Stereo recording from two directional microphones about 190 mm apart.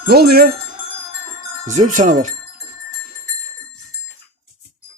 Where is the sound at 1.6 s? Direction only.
40° right (ahead or behind).